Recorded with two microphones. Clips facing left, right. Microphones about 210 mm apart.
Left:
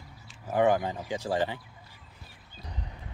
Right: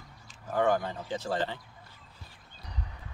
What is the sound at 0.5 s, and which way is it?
Speech, 15° left (ahead or behind).